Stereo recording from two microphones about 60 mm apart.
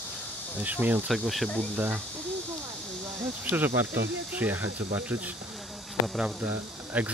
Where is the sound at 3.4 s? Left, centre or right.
Right.